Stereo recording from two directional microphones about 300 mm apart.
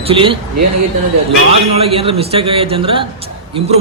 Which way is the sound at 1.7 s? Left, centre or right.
Centre.